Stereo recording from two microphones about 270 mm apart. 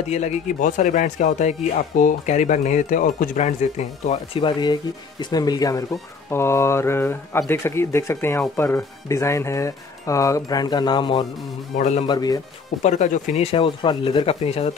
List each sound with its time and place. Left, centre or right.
0.1 s speech: left
11.7 s speech: left
12.1 s speech: centre
12.8 s speech: left